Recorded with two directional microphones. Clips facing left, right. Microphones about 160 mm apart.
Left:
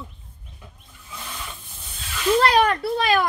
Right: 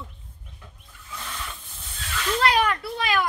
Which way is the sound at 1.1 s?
15° left (ahead or behind).